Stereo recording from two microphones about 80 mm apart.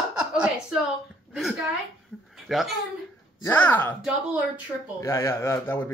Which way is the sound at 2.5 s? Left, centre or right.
Centre.